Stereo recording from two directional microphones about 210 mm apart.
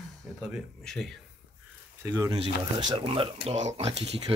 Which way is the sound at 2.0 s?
15° right (ahead or behind).